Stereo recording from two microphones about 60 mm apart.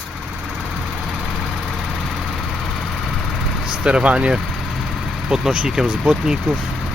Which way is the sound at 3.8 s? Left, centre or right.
Centre.